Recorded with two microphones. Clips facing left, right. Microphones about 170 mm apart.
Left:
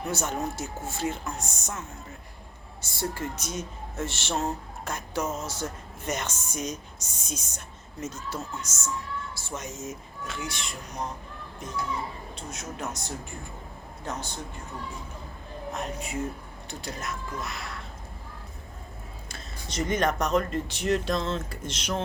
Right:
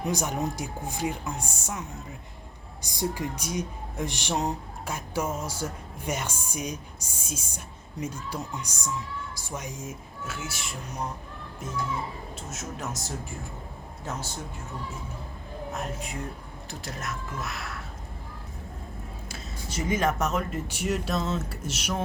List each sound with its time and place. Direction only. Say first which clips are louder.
0.0 s speech: right 1 dB; 15° right (ahead or behind)
2.8 s speech: right 2 dB; 15° right (ahead or behind)
12.4 s speech: left 1 dB; centre (ahead or behind)
15.7 s speech: left 2 dB; centre (ahead or behind)
19.3 s speech: right 1 dB; 5° right (ahead or behind)